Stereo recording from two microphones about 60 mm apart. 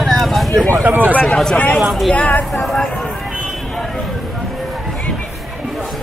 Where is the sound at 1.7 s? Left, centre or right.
Centre.